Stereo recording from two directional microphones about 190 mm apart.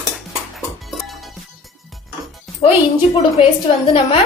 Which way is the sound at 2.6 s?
30° left (ahead or behind).